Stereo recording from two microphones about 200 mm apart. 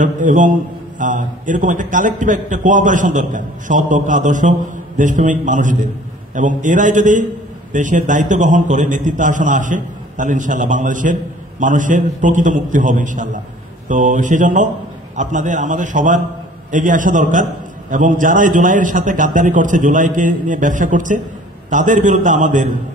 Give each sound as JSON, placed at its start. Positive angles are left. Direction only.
{"t": 0.0, "sound": "a man's voice", "side_deg": -40}